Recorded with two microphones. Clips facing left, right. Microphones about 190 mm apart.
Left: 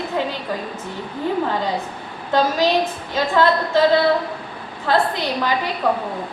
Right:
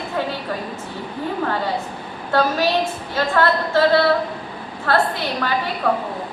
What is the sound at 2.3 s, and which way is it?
A woman's voice, 15° left (ahead or behind).